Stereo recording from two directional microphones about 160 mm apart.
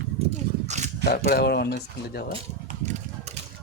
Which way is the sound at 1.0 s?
75° left (ahead or behind).